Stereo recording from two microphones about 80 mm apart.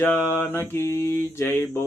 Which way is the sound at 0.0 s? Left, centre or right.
Left.